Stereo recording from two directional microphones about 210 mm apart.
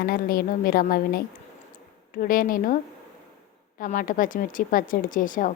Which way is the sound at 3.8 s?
40° left (ahead or behind).